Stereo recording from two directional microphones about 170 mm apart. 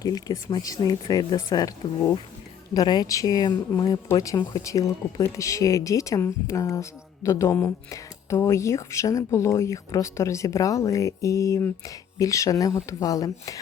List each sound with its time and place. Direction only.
0.0 s speech: 20° left (ahead or behind)